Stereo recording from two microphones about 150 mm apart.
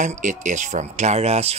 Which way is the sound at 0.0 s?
55° right (ahead or behind).